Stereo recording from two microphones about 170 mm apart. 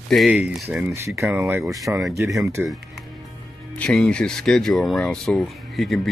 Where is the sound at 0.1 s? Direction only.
5° right (ahead or behind).